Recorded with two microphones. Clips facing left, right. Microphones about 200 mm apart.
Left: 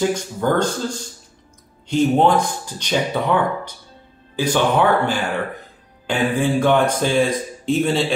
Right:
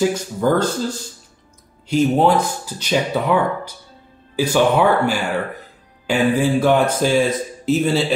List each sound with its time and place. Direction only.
0.1 s a man's voice: 5° right (ahead or behind)